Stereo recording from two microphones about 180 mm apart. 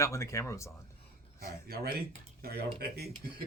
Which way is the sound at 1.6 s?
60° right (ahead or behind).